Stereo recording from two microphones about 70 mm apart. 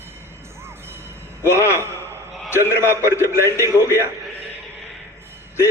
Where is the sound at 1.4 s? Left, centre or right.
Left.